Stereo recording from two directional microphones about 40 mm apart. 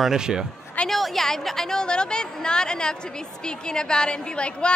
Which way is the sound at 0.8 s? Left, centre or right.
Centre.